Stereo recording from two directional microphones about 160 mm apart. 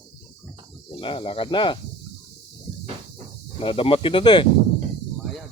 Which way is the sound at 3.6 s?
35° left (ahead or behind).